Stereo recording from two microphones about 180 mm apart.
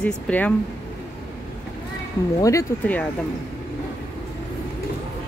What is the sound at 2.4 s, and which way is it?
Speech, 15° left (ahead or behind).